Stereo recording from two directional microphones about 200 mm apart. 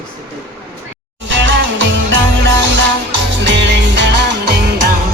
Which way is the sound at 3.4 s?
60° right (ahead or behind).